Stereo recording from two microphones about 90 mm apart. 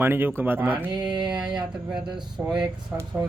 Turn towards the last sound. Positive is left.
turn(degrees=-20)  # may be behind; listen again after turning